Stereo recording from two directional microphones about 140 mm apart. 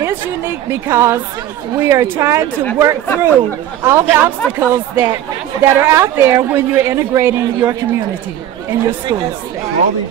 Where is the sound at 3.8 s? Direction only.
15° right (ahead or behind).